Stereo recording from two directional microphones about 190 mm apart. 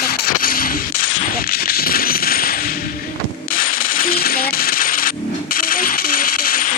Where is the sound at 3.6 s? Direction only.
50° left (ahead or behind).